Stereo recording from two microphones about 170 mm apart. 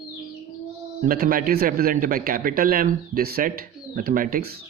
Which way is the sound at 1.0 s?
55° right (ahead or behind).